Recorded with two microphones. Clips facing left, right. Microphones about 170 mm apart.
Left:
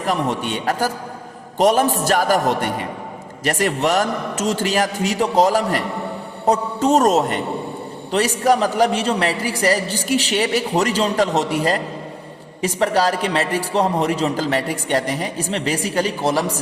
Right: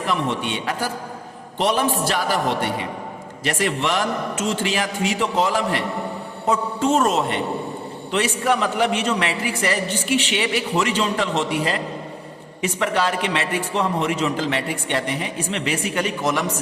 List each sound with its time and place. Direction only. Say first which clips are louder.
0.0 s a man's voice: left 2 dB; 40° left (ahead or behind)